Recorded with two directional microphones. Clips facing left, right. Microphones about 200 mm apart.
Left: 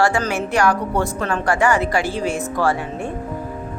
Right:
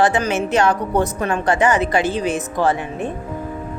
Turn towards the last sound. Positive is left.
turn(degrees=-20)  # may be behind; listen again after turning